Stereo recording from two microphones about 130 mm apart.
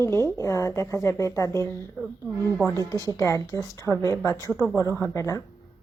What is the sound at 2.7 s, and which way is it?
Speech, 25° right (ahead or behind).